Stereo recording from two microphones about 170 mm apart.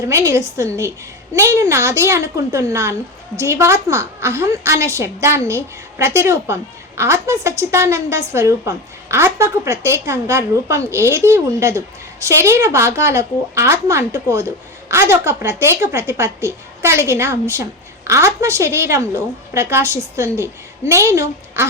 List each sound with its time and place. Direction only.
0.1 s a woman's voice: 15° right (ahead or behind)